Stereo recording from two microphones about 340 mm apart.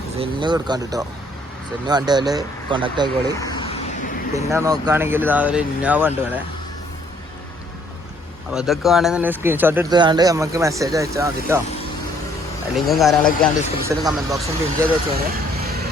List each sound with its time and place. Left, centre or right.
0.2 s speech: centre
3.4 s vehicle: centre
4.4 s speech: centre
8.5 s speech: centre
12.7 s speech: centre
15.3 s vehicle: right